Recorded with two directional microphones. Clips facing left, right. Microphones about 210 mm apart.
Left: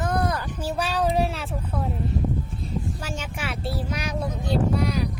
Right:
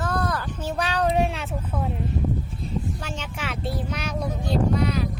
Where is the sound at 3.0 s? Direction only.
10° left (ahead or behind).